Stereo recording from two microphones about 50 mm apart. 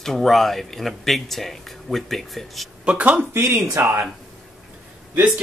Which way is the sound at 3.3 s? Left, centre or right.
Right.